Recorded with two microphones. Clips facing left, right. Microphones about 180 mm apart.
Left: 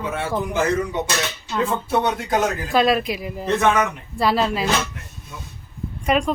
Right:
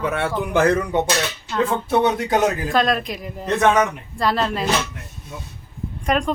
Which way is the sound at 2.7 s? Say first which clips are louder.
Left 2 dB; 5° left (ahead or behind).